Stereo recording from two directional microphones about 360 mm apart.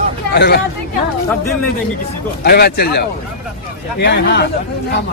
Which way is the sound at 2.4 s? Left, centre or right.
Left.